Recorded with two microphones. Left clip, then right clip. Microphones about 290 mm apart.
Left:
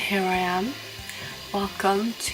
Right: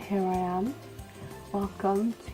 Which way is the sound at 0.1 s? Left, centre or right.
Centre.